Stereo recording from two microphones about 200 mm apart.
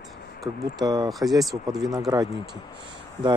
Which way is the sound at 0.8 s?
20° right (ahead or behind).